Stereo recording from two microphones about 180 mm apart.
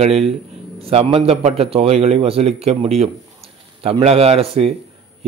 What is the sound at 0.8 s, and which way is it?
A man's voice, 35° right (ahead or behind).